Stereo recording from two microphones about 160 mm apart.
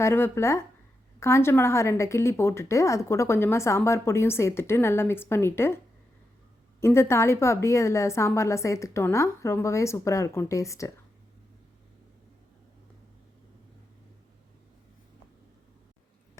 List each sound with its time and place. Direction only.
0.0 s a woman's voice: 15° left (ahead or behind)